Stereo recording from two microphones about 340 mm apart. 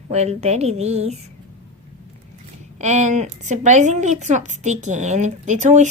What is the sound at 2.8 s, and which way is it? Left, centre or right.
A woman's voice, right.